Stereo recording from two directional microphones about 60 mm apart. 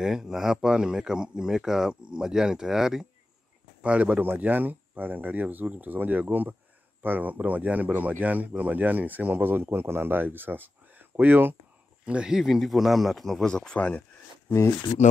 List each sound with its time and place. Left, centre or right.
0.0 s speech: centre
3.8 s speech: right
12.1 s speech: centre
12.4 s speech: centre
13.7 s speech: left